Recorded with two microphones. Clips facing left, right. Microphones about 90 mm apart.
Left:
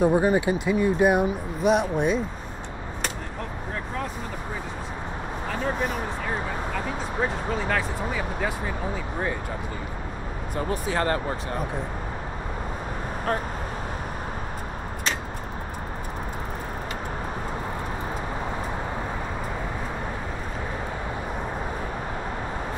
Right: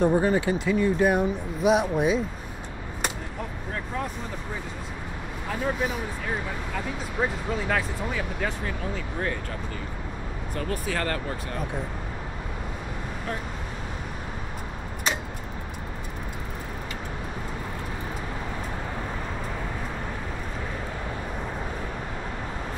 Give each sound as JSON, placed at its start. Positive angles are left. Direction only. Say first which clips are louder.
{"t": 0.0, "sound": "speech", "louder": "left 1 dB", "side_deg": 15}
{"t": 1.6, "sound": "speech", "louder": "even", "side_deg": 0}
{"t": 5.5, "sound": "speech", "louder": "even", "side_deg": 0}
{"t": 7.2, "sound": "speech", "louder": "even", "side_deg": 0}
{"t": 10.5, "sound": "speech", "louder": "left 3 dB", "side_deg": 20}